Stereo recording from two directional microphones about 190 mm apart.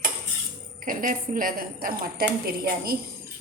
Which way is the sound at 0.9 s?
45° right (ahead or behind).